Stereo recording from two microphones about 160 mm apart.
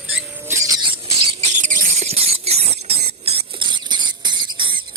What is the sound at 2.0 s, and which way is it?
Squeal, 40° right (ahead or behind).